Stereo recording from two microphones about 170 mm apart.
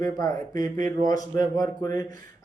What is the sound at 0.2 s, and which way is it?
Speech, 20° left (ahead or behind).